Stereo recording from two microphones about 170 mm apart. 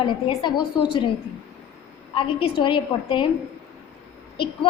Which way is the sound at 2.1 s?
30° left (ahead or behind).